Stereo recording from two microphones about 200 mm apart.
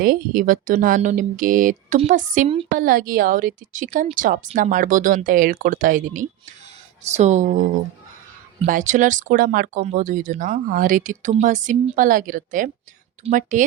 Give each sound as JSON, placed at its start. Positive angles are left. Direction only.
{"t": 0.0, "sound": "a woman's voice", "side_deg": -45}